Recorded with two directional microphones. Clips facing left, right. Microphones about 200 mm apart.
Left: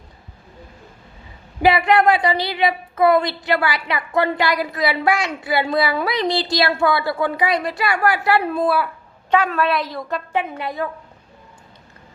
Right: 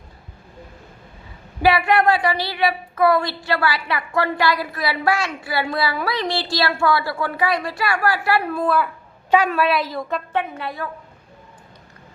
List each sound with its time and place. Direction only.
1.6 s a woman's voice: 20° left (ahead or behind)
9.3 s a woman's voice: 10° right (ahead or behind)
10.3 s a woman's voice: 15° left (ahead or behind)